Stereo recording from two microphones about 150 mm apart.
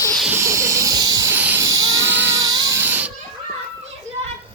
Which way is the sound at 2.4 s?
25° right (ahead or behind).